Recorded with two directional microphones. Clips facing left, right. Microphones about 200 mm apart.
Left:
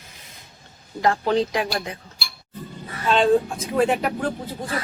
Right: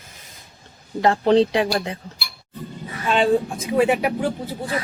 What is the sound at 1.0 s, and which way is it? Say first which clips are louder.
Speech: right 4 dB; 30° right (ahead or behind).